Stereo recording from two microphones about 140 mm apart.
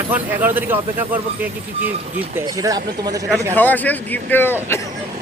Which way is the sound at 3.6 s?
10° left (ahead or behind).